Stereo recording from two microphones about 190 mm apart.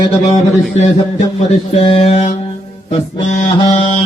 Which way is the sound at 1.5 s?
30° left (ahead or behind).